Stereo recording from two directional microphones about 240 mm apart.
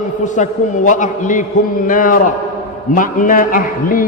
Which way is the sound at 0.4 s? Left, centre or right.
Left.